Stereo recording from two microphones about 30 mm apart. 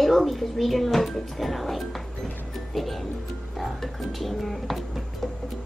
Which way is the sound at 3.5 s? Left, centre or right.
Centre.